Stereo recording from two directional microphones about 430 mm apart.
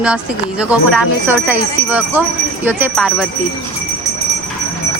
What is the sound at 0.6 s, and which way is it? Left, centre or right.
Speech, centre.